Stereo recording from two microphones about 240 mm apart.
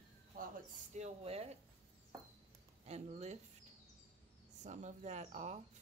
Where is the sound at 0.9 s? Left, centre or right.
Right.